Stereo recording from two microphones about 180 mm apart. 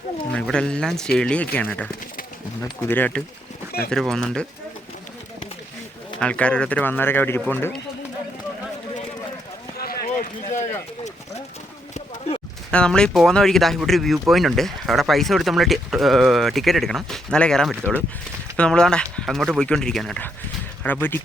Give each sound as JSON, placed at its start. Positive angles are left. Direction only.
{"t": 0.3, "sound": "speech", "side_deg": 5}
{"t": 6.1, "sound": "speech", "side_deg": 5}
{"t": 9.7, "sound": "run", "side_deg": 55}
{"t": 12.7, "sound": "speech", "side_deg": 5}